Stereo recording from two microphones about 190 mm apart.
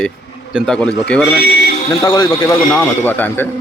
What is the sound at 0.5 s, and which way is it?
Speech, centre (ahead or behind).